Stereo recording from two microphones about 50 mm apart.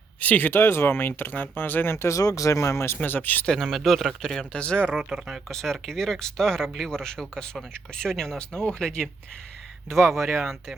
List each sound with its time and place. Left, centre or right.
0.2 s speech: left
0.5 s speech: left
2.0 s speech: left
3.0 s speech: left
3.6 s speech: centre
4.5 s speech: left
4.9 s speech: centre
5.5 s speech: centre
9.9 s speech: centre